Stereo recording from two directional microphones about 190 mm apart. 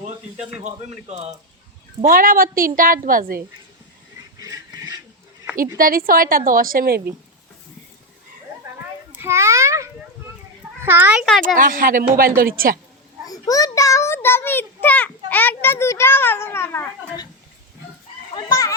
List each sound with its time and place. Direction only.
0.6 s speech: 35° right (ahead or behind)
2.0 s a woman's voice: 45° right (ahead or behind)
4.4 s a sound: 20° right (ahead or behind)
5.7 s a woman's voice: 50° right (ahead or behind)
9.1 s children playing: 15° right (ahead or behind)
10.8 s a child's voice: 10° right (ahead or behind)
11.5 s a woman's voice: 45° right (ahead or behind)
13.2 s a child's voice: 20° left (ahead or behind)
18.3 s a child's voice: 20° left (ahead or behind)